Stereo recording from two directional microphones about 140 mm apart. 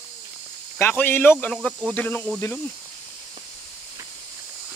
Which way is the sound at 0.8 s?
15° left (ahead or behind).